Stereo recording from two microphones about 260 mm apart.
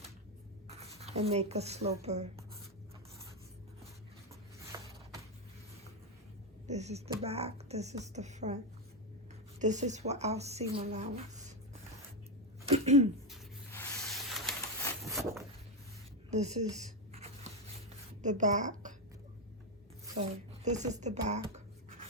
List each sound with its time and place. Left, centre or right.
0.7 s speech: right
4.7 s a sound: centre
6.7 s a woman's voice: right
9.6 s a woman's voice: right
10.8 s a sound: right
12.6 s throat clearing: right
13.3 s a sound: centre
16.3 s a woman's voice: right
16.6 s writing: right
20.7 s a woman's voice: right